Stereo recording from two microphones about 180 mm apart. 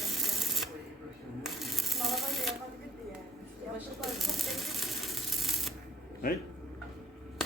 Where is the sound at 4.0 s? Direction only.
Centre (ahead or behind).